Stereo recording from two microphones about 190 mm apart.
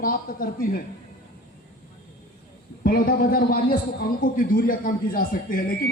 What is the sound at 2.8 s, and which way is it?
Speech, 50° left (ahead or behind).